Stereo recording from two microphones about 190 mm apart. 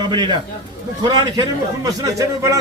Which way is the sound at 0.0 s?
25° right (ahead or behind).